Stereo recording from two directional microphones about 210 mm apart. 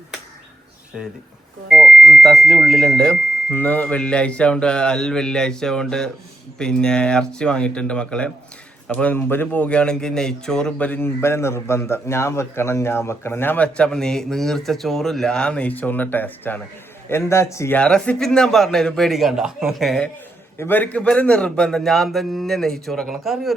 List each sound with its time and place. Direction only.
0.9 s a man's voice: centre (ahead or behind)